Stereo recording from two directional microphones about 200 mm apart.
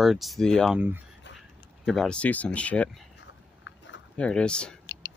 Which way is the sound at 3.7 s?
75° left (ahead or behind).